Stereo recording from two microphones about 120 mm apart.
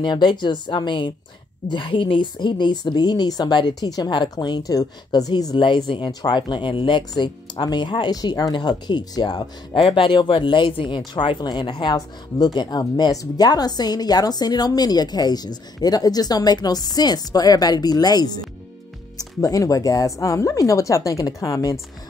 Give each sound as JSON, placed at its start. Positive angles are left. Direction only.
{"t": 0.0, "sound": "a woman's voice", "side_deg": 40}